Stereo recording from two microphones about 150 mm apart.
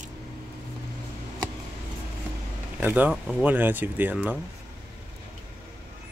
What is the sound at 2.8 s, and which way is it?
Speech, 10° right (ahead or behind).